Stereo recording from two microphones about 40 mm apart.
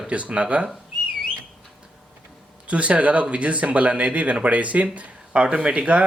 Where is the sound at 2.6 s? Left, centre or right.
Right.